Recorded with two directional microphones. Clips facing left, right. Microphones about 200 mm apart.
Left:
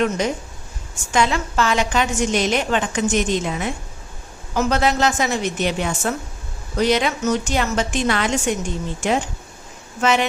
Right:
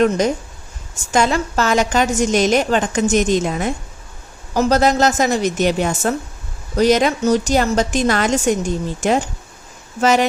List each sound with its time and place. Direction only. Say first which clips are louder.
1.1 s a woman's voice: right 3 dB; 40° right (ahead or behind)